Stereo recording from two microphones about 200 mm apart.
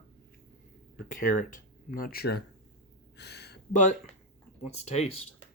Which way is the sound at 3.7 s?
40° left (ahead or behind).